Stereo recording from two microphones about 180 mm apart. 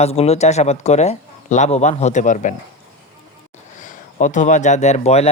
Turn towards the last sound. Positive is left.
turn(degrees=35)  # may be behind; listen again after turning